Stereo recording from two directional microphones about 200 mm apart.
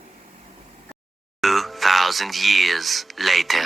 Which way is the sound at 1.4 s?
Centre (ahead or behind).